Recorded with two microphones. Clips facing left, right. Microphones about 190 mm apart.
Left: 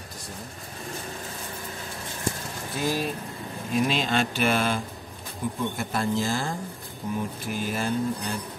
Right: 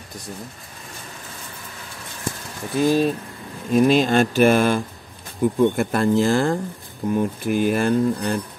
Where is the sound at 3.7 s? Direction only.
45° right (ahead or behind).